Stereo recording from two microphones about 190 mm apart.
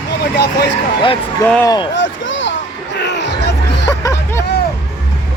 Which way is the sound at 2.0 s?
75° left (ahead or behind).